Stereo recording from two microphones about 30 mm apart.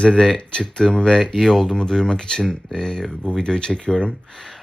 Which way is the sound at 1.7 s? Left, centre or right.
Centre.